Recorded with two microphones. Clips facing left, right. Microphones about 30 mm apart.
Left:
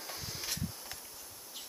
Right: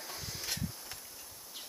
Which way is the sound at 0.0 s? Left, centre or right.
Centre.